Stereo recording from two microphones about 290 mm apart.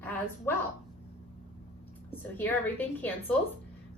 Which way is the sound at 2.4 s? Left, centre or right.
Centre.